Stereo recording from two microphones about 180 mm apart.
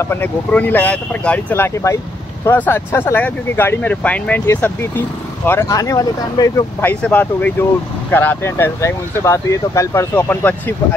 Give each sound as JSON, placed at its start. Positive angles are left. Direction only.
{"t": 0.0, "sound": "speech", "side_deg": 10}